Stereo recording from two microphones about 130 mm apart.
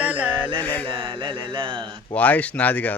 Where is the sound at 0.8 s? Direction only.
40° right (ahead or behind).